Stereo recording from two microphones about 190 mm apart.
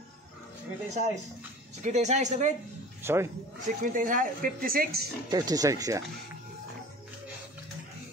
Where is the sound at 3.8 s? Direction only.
45° right (ahead or behind).